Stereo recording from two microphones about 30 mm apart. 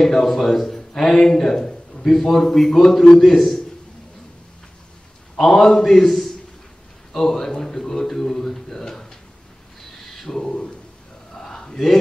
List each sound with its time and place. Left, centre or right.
0.0 s speech: centre
1.7 s a sound: left
2.1 s a man's voice: centre
5.4 s speech: centre
10.1 s speech: centre
11.3 s a sound: centre